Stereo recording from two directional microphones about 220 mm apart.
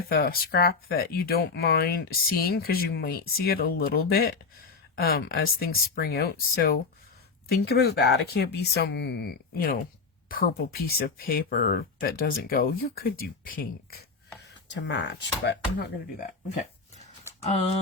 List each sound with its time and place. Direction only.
0.0 s speech: 45° left (ahead or behind)
14.8 s speech: 55° left (ahead or behind)